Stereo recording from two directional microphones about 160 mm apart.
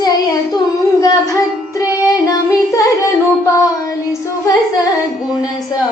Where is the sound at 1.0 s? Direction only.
25° left (ahead or behind).